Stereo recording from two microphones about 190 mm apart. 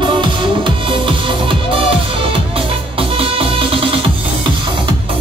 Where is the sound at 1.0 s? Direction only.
25° right (ahead or behind).